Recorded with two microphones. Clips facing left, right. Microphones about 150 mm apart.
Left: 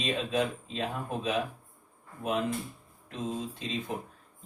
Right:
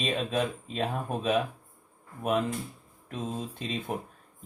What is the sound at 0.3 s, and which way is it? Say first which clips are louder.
Speech: even; 55° right (ahead or behind).